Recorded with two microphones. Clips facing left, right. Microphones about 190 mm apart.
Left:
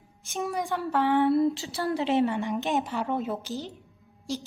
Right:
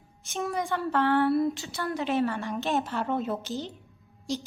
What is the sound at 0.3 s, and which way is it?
Speech, 10° left (ahead or behind).